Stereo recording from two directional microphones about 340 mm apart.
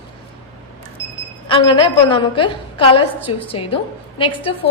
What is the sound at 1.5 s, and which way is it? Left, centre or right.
A woman's voice, centre.